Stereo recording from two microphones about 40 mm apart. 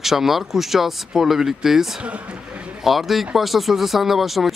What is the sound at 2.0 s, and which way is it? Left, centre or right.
Speech, right.